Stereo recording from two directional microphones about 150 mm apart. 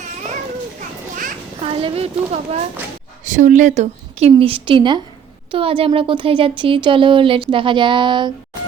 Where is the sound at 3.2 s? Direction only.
55° right (ahead or behind); by 8.3 s 30° right (ahead or behind).